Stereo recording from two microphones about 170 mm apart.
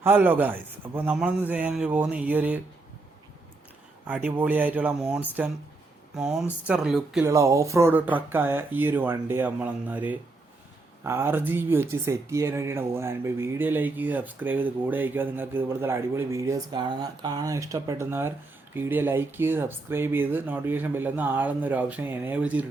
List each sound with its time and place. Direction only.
0.0 s speech: 10° right (ahead or behind)
4.0 s speech: 10° right (ahead or behind)
7.3 s speech: 15° right (ahead or behind)